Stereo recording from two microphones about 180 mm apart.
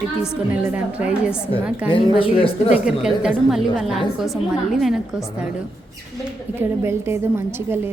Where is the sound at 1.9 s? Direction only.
30° left (ahead or behind).